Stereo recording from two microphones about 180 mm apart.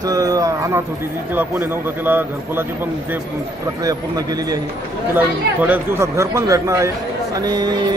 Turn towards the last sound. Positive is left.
turn(degrees=-20)  # may be behind; listen again after turning